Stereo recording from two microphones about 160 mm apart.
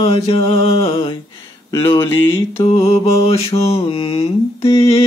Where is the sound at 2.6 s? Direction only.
40° left (ahead or behind).